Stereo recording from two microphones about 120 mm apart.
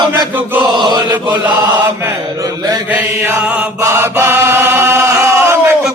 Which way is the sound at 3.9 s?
20° right (ahead or behind).